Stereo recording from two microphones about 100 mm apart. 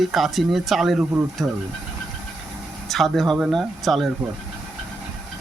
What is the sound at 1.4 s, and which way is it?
Speech, 20° right (ahead or behind).